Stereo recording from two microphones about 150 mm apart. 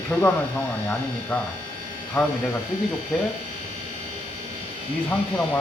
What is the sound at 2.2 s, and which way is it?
Speech, 10° left (ahead or behind).